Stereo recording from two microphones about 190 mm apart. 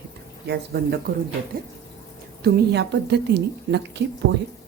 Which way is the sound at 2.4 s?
65° right (ahead or behind).